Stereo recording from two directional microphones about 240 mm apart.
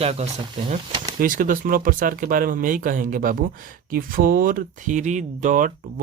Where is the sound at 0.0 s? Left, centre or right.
Right.